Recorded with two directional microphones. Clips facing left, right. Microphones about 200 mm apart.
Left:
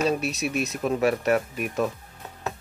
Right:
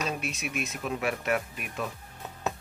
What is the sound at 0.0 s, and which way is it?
Speech, 40° left (ahead or behind).